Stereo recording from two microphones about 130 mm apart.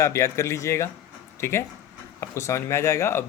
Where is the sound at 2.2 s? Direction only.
20° left (ahead or behind).